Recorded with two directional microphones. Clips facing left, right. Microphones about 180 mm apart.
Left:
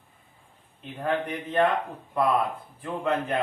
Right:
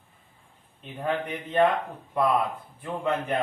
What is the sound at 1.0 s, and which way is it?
Speech, centre (ahead or behind).